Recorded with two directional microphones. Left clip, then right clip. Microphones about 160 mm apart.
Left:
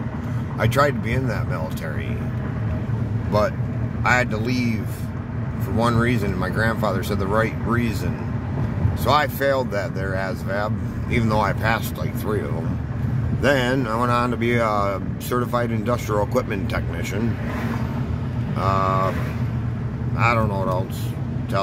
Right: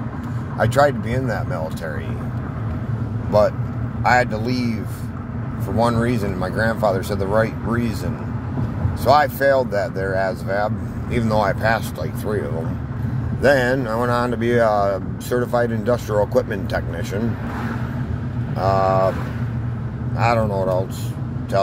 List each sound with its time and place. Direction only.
3.3 s speech: 15° left (ahead or behind)
5.8 s speech: 15° left (ahead or behind)
9.0 s speech: 15° left (ahead or behind)
13.4 s speech: 15° left (ahead or behind)
18.6 s speech: 15° left (ahead or behind)
20.2 s speech: 10° left (ahead or behind)